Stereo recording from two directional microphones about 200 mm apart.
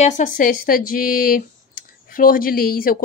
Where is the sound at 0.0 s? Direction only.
40° left (ahead or behind).